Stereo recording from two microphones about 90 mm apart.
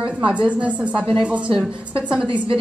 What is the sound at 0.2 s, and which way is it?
A woman's voice, 15° right (ahead or behind).